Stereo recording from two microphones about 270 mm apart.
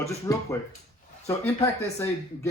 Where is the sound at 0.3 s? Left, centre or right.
Centre.